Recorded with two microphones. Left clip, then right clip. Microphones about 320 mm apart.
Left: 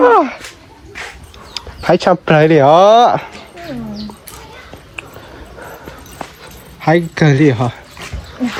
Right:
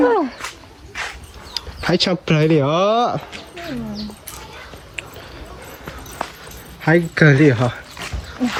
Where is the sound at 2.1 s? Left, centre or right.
Centre.